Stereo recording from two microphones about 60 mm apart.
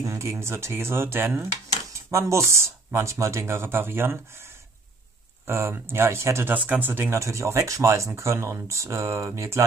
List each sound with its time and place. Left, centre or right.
0.0 s speech: right
2.0 s speech: right
5.5 s speech: right
6.5 s speech: right
6.9 s speech: right